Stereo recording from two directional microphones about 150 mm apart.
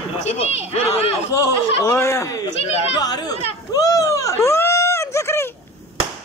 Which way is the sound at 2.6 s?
45° left (ahead or behind).